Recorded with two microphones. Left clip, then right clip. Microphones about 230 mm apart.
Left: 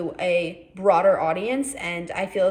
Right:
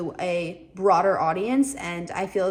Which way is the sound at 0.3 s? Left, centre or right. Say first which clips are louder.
Left 5 dB; right.